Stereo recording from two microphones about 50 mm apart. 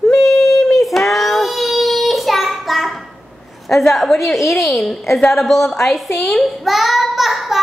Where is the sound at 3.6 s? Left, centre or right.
Centre.